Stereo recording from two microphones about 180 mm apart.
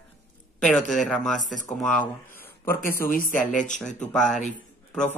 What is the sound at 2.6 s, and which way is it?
Speech, 10° left (ahead or behind).